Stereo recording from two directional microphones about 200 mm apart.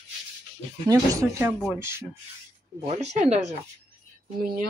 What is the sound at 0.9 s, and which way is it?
Speech, 15° right (ahead or behind).